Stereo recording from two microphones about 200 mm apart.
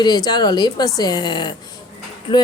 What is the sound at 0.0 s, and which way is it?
Speech, 20° left (ahead or behind).